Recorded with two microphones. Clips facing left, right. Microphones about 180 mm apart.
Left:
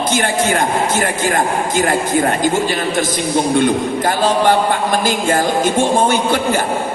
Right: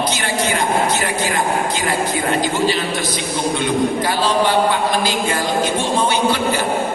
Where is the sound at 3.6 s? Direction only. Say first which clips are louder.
Left 3 dB; 50° left (ahead or behind).